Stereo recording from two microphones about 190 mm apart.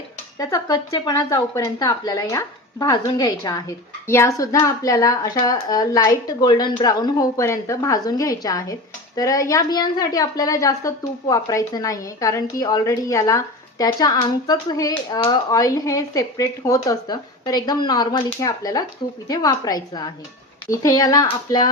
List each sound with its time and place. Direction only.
0.3 s a woman's voice: 20° left (ahead or behind)